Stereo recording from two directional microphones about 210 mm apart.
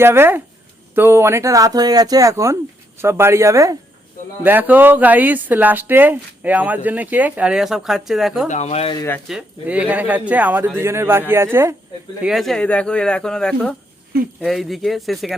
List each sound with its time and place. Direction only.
0.0 s speech: 10° right (ahead or behind)
8.4 s speech: 35° left (ahead or behind)
9.3 s speech: 5° right (ahead or behind)
12.2 s speech: centre (ahead or behind)